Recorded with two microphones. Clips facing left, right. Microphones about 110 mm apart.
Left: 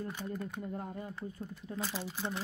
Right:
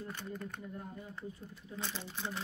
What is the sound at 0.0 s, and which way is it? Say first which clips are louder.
Speech: left 4 dB; 10° left (ahead or behind).